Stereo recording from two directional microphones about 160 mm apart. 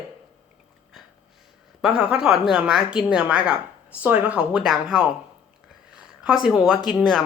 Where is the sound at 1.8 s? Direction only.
5° right (ahead or behind).